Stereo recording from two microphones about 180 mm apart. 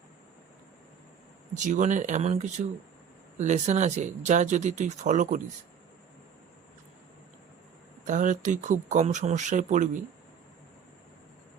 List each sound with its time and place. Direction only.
1.5 s speech: 45° right (ahead or behind)
8.0 s speech: 45° right (ahead or behind)